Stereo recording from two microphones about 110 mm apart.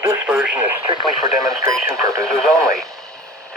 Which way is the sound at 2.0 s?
30° right (ahead or behind).